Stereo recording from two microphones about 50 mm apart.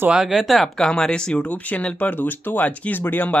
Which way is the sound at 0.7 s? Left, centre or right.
Centre.